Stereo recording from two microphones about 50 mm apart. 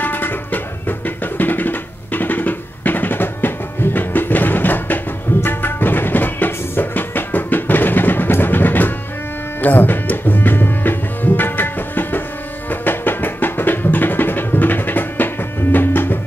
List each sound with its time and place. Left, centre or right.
0.0 s music: left
9.6 s tabla: left
12.8 s music: left